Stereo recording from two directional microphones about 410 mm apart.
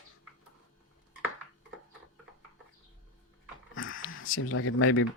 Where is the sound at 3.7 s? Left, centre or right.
Left.